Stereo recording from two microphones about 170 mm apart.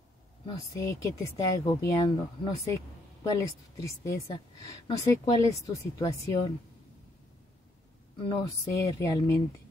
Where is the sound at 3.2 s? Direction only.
20° left (ahead or behind).